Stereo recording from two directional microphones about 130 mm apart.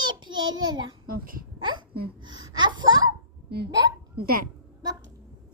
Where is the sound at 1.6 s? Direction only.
35° right (ahead or behind).